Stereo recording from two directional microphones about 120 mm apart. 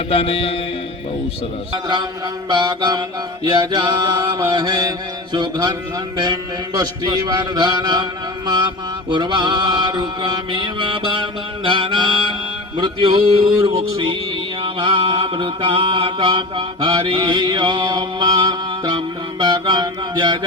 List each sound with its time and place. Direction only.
0.1 s mantra: 55° left (ahead or behind)
2.5 s mantra: 40° right (ahead or behind)
9.0 s mantra: 40° right (ahead or behind)
14.6 s mantra: 45° right (ahead or behind)